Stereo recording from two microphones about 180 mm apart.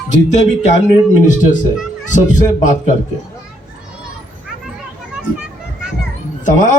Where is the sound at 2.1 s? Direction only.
45° left (ahead or behind).